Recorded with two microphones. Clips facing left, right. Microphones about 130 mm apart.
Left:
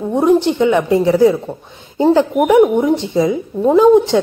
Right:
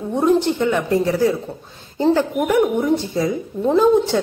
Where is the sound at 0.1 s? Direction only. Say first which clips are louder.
Left 4 dB; 15° left (ahead or behind).